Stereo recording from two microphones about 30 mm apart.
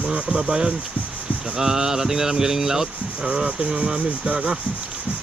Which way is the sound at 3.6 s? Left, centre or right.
Right.